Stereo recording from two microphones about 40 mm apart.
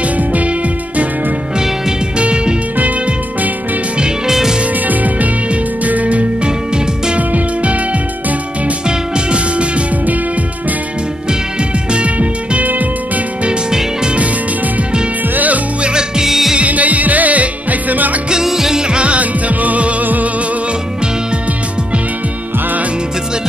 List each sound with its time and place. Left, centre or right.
2.1 s music: right
4.3 s music: centre
4.8 s music: right
8.8 s music: right
11.9 s music: right
13.5 s music: centre
15.3 s music: right
15.8 s music: right
16.3 s music: centre
16.5 s music: right
18.3 s music: centre; by 20.2 s right